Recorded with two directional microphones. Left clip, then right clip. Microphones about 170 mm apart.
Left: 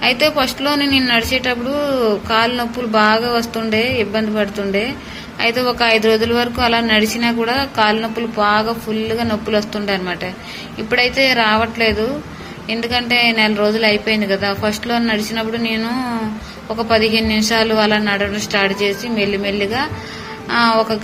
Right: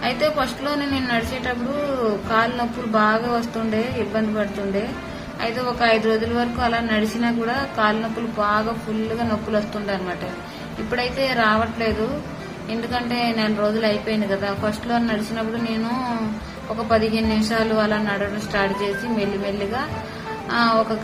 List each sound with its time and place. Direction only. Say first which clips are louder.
0.0 s a woman's voice: left 6 dB; 10° left (ahead or behind)